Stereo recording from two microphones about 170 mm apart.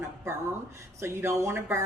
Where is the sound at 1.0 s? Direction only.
15° right (ahead or behind).